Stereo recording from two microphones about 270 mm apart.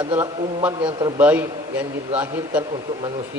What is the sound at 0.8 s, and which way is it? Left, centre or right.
Speech, centre.